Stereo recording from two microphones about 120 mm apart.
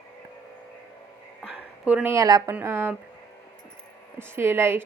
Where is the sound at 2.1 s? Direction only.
25° right (ahead or behind).